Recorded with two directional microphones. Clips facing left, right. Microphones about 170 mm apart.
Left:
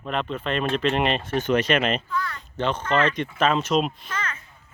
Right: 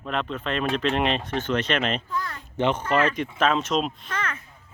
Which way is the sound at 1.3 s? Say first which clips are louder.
Left 3 dB; 15° left (ahead or behind).